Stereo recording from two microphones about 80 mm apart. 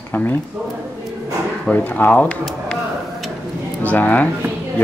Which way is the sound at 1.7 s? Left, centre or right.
Left.